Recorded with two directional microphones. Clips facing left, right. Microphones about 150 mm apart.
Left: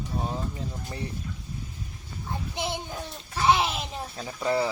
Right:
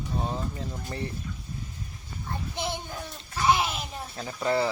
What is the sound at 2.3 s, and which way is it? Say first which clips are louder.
A child's voice: left 1 dB; 20° left (ahead or behind).